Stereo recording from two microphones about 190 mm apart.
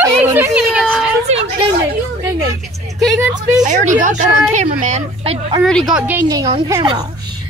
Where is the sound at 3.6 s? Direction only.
40° right (ahead or behind).